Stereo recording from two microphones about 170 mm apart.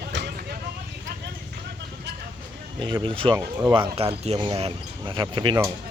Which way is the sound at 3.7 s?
30° right (ahead or behind).